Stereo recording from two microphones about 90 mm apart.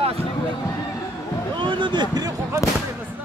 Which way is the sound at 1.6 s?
65° right (ahead or behind).